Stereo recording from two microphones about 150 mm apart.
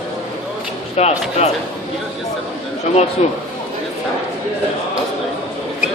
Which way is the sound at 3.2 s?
50° left (ahead or behind).